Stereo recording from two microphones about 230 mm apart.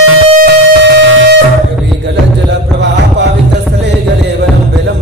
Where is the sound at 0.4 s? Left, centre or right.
Right.